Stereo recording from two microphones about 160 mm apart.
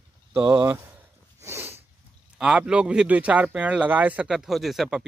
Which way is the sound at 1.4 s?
15° right (ahead or behind).